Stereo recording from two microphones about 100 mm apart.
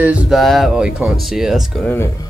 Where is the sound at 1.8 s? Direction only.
25° left (ahead or behind).